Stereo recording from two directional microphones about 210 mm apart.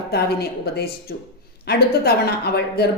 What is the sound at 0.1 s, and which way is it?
A woman's voice, 50° left (ahead or behind).